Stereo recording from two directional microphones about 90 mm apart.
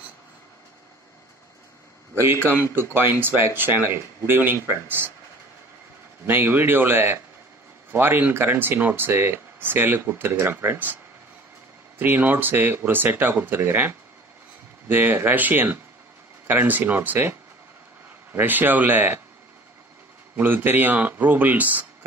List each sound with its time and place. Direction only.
2.6 s speech: 25° right (ahead or behind)
6.2 s speech: 25° right (ahead or behind)
12.0 s speech: 20° right (ahead or behind)
20.3 s speech: 20° right (ahead or behind)